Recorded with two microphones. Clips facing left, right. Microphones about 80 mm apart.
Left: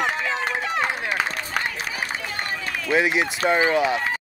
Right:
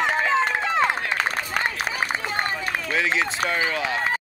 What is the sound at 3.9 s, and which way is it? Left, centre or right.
Run, right.